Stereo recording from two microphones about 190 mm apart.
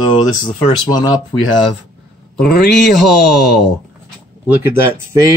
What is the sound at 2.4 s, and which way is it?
Speech, 55° left (ahead or behind).